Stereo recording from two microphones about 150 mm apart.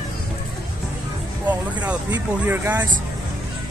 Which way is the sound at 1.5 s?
10° right (ahead or behind).